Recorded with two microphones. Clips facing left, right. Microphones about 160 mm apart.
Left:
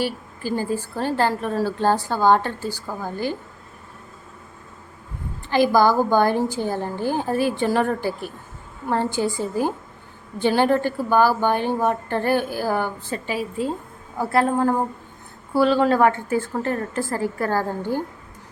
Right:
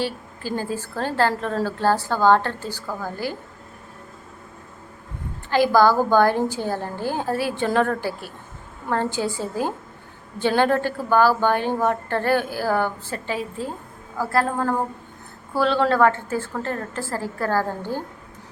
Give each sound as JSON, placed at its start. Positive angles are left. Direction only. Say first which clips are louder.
{"t": 0.0, "sound": "a woman's voice", "louder": "left 2 dB", "side_deg": 15}
{"t": 5.5, "sound": "a woman's voice", "louder": "even", "side_deg": 15}